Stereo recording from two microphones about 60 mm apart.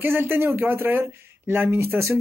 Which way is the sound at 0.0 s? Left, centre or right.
Right.